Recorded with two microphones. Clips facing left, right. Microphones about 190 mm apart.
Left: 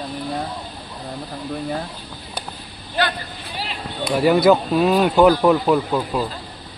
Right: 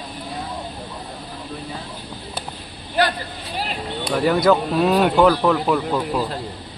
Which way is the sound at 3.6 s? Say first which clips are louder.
Right 1 dB; 45° right (ahead or behind).